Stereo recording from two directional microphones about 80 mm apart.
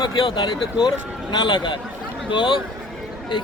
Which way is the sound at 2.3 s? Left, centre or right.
Left.